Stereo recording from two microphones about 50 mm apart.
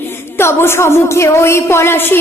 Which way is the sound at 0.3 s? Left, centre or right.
Left.